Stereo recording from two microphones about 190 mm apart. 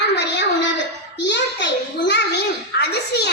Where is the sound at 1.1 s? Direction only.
70° left (ahead or behind).